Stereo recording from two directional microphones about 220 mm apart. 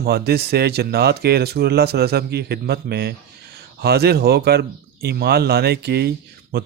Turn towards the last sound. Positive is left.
turn(degrees=-50)  # may be behind; listen again after turning